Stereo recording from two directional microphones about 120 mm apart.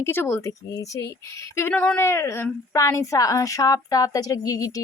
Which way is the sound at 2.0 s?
20° left (ahead or behind).